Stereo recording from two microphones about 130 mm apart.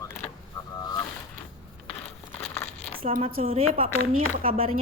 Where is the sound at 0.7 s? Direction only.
30° left (ahead or behind).